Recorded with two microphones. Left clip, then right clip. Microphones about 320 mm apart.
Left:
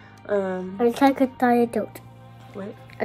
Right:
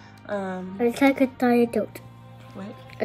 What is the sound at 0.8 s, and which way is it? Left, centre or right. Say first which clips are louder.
Speech: left 1 dB; centre.